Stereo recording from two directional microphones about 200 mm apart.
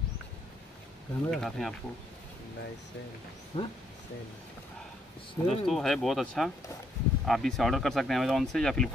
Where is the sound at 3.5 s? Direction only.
30° left (ahead or behind).